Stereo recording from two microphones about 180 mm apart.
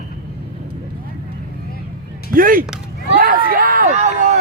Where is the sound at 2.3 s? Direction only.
50° right (ahead or behind).